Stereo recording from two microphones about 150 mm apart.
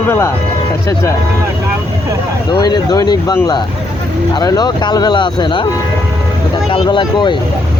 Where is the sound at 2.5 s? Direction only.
25° left (ahead or behind).